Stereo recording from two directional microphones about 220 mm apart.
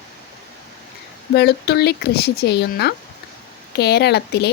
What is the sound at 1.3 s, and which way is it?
Speech, 45° left (ahead or behind).